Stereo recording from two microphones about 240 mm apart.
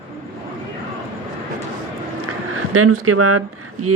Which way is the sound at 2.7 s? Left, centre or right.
Right.